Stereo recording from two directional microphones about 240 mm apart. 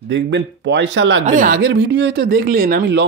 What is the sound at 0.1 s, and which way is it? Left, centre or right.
Speech, right.